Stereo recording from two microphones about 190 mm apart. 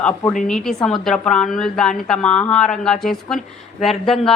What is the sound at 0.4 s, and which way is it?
A woman's voice, 5° left (ahead or behind).